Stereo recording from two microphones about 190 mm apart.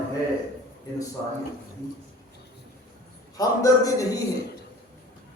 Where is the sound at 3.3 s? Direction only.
15° left (ahead or behind).